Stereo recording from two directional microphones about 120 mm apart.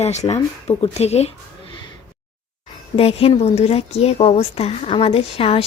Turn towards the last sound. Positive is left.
turn(degrees=50)  # may be behind; listen again after turning